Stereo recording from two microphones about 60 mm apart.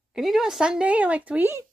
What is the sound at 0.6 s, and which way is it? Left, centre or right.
Speech, centre.